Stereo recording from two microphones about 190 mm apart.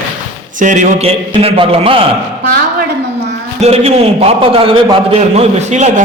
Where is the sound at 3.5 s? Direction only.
35° right (ahead or behind).